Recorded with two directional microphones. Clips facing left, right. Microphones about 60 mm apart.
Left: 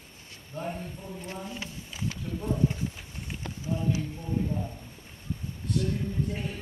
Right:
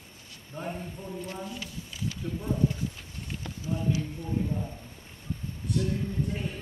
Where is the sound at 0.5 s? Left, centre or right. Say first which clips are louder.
Left 1 dB; centre.